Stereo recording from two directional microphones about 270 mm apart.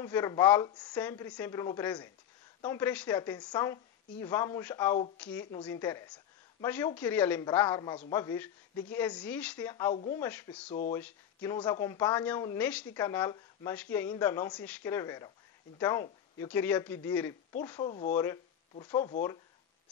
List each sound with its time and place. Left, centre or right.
0.0 s a woman's voice: centre
6.0 s a sound: centre
7.0 s a woman's voice: centre
17.8 s speech: left
18.1 s speech: centre